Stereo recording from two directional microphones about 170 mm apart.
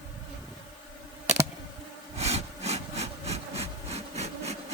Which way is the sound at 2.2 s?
40° right (ahead or behind).